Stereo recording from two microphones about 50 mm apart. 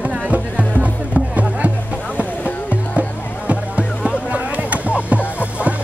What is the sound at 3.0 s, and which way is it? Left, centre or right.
Music, right.